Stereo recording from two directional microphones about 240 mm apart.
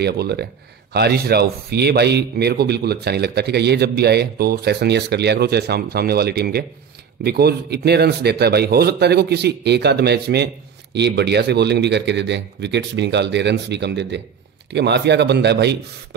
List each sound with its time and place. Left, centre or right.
0.0 s speech: right